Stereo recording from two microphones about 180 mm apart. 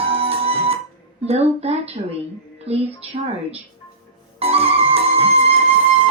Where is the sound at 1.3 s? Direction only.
35° right (ahead or behind).